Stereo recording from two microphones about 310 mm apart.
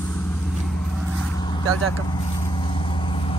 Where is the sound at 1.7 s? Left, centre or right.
Right.